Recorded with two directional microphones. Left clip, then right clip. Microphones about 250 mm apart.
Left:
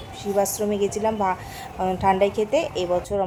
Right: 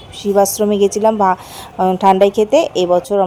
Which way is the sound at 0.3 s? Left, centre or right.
Right.